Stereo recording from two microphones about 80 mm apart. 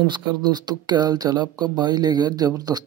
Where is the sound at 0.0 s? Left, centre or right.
Right.